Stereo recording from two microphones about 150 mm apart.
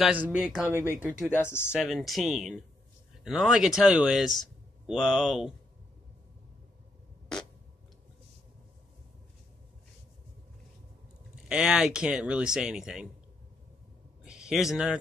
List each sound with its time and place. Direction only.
0.0 s speech: 10° right (ahead or behind)
1.3 s speech: 15° left (ahead or behind)
1.7 s speech: centre (ahead or behind)
11.4 s speech: 5° right (ahead or behind)
14.2 s speech: 5° right (ahead or behind)